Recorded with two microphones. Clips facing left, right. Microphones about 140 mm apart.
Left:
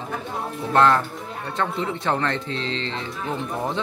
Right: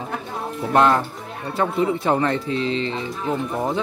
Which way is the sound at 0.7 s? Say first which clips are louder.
Right 1 dB; 15° right (ahead or behind).